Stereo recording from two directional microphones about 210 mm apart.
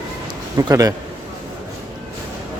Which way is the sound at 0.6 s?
15° right (ahead or behind).